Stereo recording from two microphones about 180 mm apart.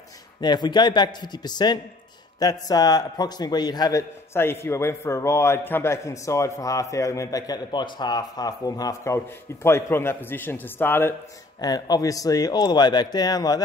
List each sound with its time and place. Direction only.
0.4 s a man's voice: 25° left (ahead or behind)